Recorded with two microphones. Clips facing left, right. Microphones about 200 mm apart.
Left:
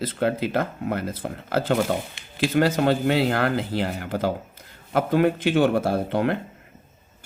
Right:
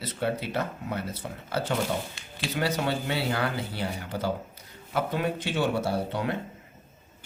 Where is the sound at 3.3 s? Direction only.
55° left (ahead or behind).